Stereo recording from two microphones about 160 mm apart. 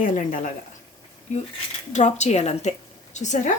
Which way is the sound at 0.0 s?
50° left (ahead or behind).